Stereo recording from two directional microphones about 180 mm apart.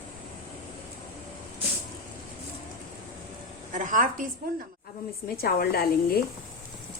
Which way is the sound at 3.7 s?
50° right (ahead or behind).